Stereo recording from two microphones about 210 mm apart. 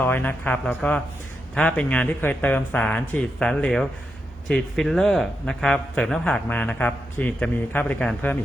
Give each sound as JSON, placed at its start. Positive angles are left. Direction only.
{"t": 0.0, "sound": "a man's voice", "side_deg": 10}